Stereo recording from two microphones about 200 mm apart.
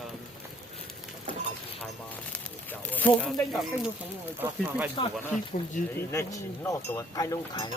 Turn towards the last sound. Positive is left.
turn(degrees=20)  # may be behind; listen again after turning